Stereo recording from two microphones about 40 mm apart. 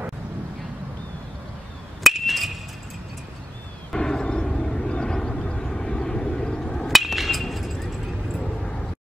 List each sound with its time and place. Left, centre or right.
2.1 s chink: centre
3.9 s a sound: centre
4.9 s vehicle: left
6.9 s hammer: centre